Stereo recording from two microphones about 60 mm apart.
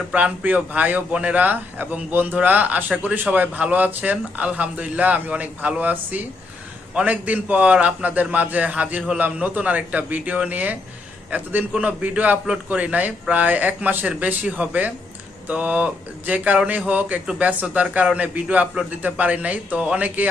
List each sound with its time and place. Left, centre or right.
0.1 s speech: right